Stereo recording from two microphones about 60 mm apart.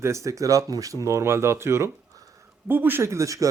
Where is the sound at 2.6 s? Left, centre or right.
Right.